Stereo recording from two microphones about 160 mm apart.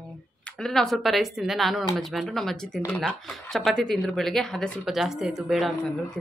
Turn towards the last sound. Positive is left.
turn(degrees=0)  # may be behind; listen again after turning